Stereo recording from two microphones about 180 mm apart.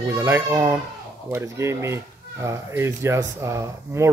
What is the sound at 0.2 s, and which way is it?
Speech, 15° right (ahead or behind).